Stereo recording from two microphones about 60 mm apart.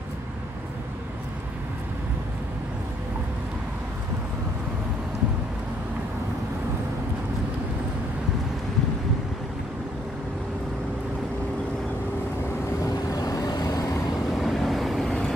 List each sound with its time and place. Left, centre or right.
13.1 s vehicle: left
14.3 s vehicle: centre